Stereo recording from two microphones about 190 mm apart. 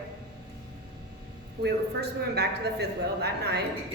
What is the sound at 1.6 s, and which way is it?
A woman's voice, 60° right (ahead or behind).